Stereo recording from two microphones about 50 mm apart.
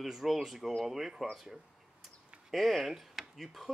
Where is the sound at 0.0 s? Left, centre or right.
Centre.